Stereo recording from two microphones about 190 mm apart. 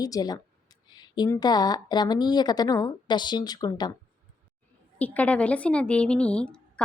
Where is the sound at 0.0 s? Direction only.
20° left (ahead or behind).